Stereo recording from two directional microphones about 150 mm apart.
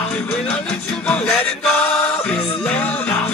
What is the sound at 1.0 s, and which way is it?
Music, 10° left (ahead or behind).